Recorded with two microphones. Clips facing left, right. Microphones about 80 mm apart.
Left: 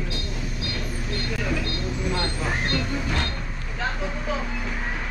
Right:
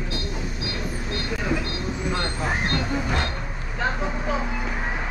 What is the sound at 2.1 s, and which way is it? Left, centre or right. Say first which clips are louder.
Speech: right 1 dB; centre.